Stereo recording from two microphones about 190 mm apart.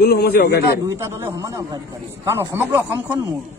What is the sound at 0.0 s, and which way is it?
Speech, 55° left (ahead or behind).